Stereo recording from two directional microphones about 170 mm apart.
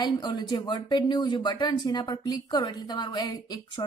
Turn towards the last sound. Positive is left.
turn(degrees=25)  # may be behind; listen again after turning